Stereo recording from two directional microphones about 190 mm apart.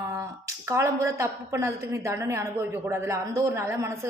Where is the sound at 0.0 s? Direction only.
15° right (ahead or behind).